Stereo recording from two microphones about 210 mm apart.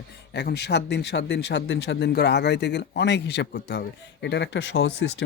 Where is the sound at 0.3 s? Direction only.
55° left (ahead or behind).